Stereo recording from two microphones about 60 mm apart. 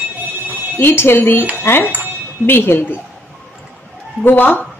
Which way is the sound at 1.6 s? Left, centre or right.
Left.